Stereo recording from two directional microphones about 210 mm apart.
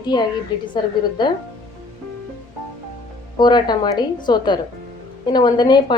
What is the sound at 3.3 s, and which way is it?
A woman's voice, 20° left (ahead or behind).